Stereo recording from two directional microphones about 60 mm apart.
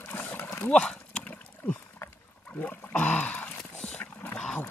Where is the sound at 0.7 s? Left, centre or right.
Centre.